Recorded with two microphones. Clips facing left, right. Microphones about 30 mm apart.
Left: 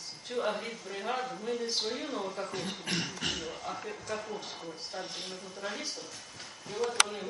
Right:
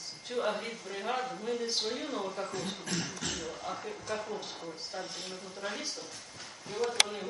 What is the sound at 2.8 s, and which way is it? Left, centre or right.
Beatboxing, left.